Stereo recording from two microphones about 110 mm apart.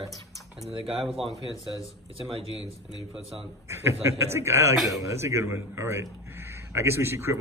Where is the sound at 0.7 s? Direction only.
55° right (ahead or behind).